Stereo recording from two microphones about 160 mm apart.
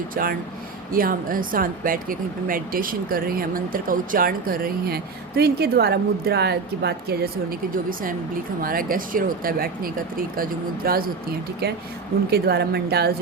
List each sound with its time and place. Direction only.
0.1 s speech: 65° right (ahead or behind)
5.4 s a woman's voice: 80° right
8.6 s speech: 65° right (ahead or behind)
11.6 s a woman's voice: 80° right